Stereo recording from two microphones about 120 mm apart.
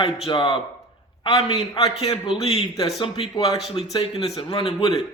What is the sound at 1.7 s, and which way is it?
A man's voice, 60° left (ahead or behind).